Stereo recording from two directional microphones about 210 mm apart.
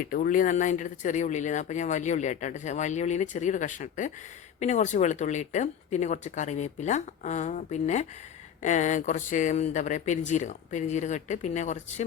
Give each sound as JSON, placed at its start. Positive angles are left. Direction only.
{"t": 0.0, "sound": "speech", "side_deg": 40}